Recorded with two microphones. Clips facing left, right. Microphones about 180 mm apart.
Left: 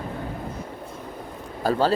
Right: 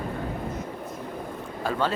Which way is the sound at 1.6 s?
35° left (ahead or behind).